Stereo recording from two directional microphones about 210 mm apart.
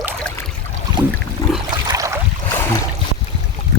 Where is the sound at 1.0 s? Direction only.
20° right (ahead or behind).